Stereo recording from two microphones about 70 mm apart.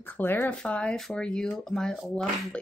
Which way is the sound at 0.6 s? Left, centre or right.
Centre.